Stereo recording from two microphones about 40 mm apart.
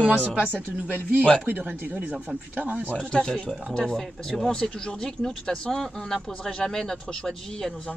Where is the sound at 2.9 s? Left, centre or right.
Centre.